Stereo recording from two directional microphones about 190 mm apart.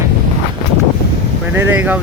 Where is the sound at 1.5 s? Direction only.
10° right (ahead or behind).